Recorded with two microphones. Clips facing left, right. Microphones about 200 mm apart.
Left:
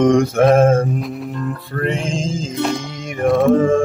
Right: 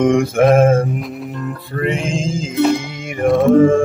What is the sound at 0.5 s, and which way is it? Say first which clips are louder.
Music: right 1 dB; 5° right (ahead or behind).